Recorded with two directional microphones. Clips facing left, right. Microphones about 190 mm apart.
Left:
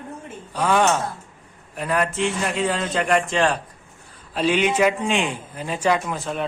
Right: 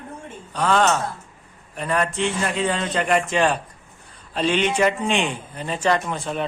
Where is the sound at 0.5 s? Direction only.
10° left (ahead or behind).